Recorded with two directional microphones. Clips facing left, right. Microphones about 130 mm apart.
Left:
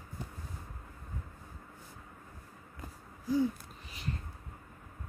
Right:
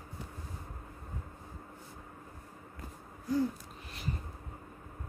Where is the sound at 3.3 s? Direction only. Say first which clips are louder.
Left 1 dB; centre (ahead or behind).